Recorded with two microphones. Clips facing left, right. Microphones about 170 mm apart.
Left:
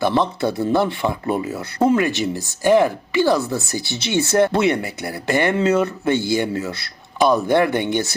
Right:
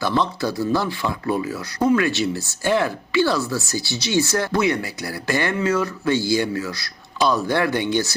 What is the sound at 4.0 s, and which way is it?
Speech, 60° left (ahead or behind).